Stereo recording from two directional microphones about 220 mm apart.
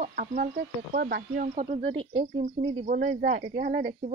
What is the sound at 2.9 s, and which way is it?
Speech, 45° right (ahead or behind).